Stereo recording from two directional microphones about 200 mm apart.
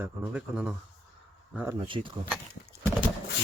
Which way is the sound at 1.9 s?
25° right (ahead or behind).